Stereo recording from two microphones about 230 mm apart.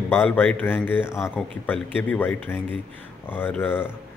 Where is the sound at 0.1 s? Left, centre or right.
Centre.